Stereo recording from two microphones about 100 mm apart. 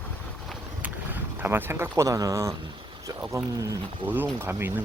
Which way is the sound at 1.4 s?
20° right (ahead or behind).